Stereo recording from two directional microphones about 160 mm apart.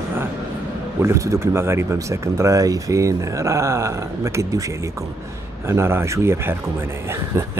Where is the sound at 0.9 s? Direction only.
20° right (ahead or behind).